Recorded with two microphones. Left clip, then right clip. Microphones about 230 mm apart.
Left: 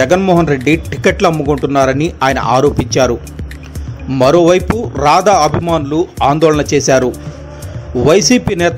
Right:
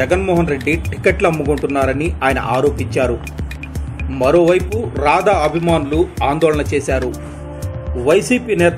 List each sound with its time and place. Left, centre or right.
0.0 s a man's voice: left